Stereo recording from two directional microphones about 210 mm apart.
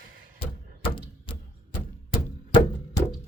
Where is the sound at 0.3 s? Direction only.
25° left (ahead or behind).